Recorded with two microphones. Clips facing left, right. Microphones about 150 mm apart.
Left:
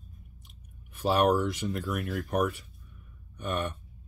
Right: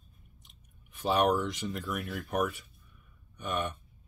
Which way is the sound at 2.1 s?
40° left (ahead or behind).